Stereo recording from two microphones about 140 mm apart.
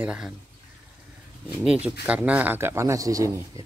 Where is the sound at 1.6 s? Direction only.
5° right (ahead or behind).